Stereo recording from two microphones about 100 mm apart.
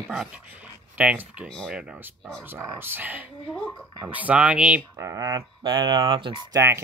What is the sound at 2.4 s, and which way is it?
Speech, 25° right (ahead or behind).